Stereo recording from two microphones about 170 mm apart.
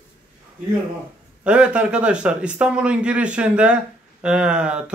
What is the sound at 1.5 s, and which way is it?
Speech, 5° right (ahead or behind).